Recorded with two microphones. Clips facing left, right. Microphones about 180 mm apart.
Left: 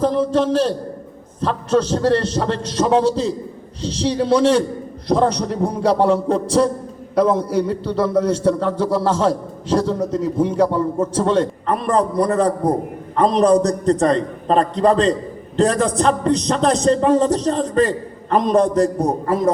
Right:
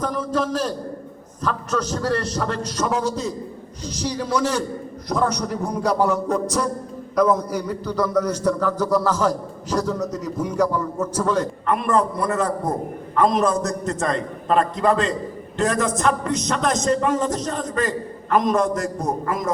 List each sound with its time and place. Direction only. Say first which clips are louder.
0.0 s a man's voice: left 7 dB; 30° left (ahead or behind)